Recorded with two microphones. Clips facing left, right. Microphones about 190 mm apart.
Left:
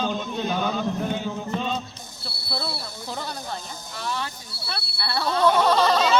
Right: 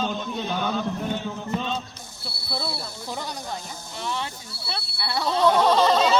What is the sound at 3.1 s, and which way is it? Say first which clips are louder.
Speech: even; 15° right (ahead or behind).